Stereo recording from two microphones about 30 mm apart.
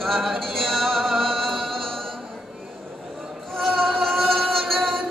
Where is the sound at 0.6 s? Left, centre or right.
Centre.